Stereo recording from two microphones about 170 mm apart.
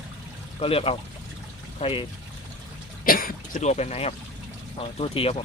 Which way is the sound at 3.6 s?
40° left (ahead or behind).